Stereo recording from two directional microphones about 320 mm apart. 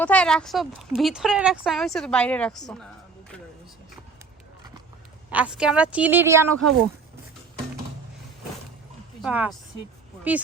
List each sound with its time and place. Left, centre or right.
0.0 s speech: centre
5.3 s speech: centre
6.6 s speech: right
9.2 s speech: centre